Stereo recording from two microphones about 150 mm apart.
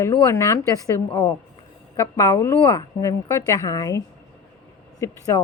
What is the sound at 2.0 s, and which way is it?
A woman's voice, 15° left (ahead or behind).